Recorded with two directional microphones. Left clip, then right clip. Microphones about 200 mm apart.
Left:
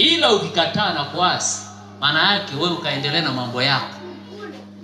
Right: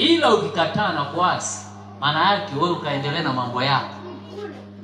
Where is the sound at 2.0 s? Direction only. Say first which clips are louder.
Left 2 dB; 60° left (ahead or behind).